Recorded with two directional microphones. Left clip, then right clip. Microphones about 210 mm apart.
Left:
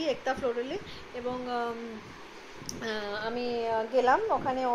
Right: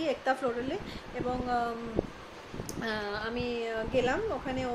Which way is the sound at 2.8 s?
10° right (ahead or behind).